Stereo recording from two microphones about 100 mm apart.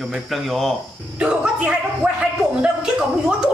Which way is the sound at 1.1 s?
10° right (ahead or behind).